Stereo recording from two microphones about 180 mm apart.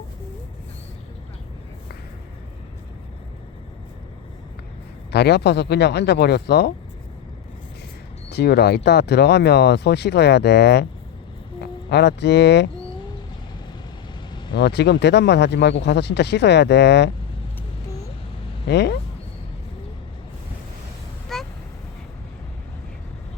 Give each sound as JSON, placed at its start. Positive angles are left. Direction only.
{"t": 5.1, "sound": "speech", "side_deg": 70}
{"t": 8.3, "sound": "speech", "side_deg": 65}
{"t": 14.5, "sound": "speech", "side_deg": 70}
{"t": 18.7, "sound": "speech", "side_deg": 70}
{"t": 21.3, "sound": "vehicle", "side_deg": 0}